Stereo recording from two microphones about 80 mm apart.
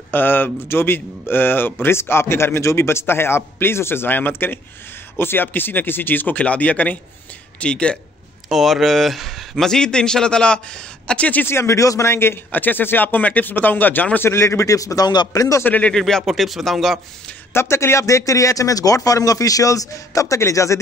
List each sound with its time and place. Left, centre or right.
0.1 s a man's voice: left
8.5 s a man's voice: centre
11.4 s speech: left
14.3 s speech: left
15.6 s speech: left
15.9 s a man's voice: centre
17.6 s speech: left